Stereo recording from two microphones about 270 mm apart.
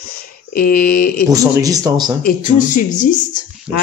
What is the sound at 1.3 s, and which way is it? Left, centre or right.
Speech, centre.